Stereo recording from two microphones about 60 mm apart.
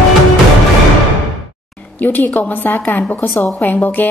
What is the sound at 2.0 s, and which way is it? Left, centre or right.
A woman's voice, left.